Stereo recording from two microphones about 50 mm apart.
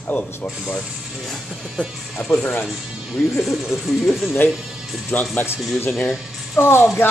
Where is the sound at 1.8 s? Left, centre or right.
Left.